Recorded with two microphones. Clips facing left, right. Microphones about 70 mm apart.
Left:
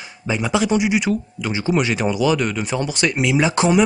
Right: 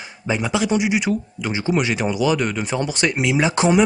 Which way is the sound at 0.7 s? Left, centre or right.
Centre.